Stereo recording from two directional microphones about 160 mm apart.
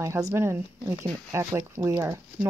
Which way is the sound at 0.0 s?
20° right (ahead or behind).